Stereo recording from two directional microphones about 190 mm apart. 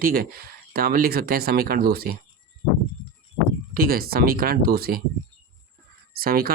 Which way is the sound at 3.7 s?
50° right (ahead or behind).